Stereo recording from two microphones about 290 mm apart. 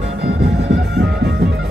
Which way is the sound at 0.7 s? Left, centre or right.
Right.